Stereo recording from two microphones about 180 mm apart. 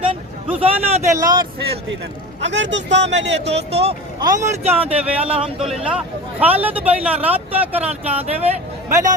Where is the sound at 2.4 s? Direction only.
85° right.